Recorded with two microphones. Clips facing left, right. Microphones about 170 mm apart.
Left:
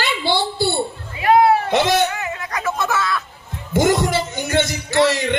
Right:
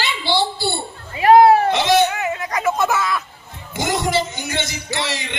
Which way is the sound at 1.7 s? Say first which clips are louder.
Even; 50° left (ahead or behind).